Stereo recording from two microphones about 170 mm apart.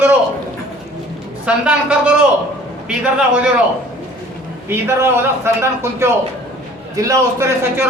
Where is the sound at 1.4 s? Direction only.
5° right (ahead or behind).